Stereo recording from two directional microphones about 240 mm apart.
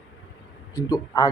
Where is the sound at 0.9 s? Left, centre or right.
Centre.